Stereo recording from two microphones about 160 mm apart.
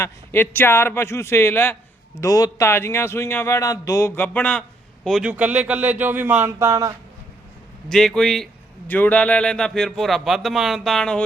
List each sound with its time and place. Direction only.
0.0 s speech: 15° left (ahead or behind); by 6.9 s 20° right (ahead or behind)
7.9 s speech: 5° left (ahead or behind)